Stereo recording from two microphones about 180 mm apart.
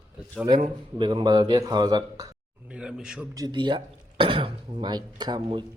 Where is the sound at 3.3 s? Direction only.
25° right (ahead or behind).